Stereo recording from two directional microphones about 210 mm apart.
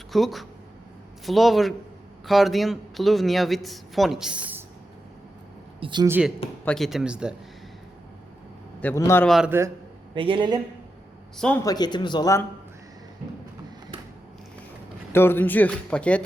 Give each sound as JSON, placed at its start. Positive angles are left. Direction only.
{"t": 0.1, "sound": "speech", "side_deg": 0}
{"t": 5.8, "sound": "a man's voice", "side_deg": -20}
{"t": 6.1, "sound": "a man's voice", "side_deg": -5}
{"t": 8.8, "sound": "speech", "side_deg": 10}
{"t": 9.3, "sound": "a man's voice", "side_deg": -5}
{"t": 10.2, "sound": "a man's voice", "side_deg": -25}
{"t": 11.3, "sound": "speech", "side_deg": 5}
{"t": 11.6, "sound": "speech", "side_deg": 20}
{"t": 15.1, "sound": "speech", "side_deg": 10}